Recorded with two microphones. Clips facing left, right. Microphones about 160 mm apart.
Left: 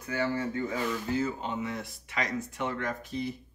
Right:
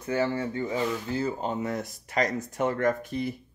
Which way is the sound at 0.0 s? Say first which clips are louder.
Right 3 dB; 30° right (ahead or behind).